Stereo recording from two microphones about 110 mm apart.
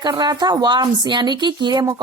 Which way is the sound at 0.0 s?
40° right (ahead or behind).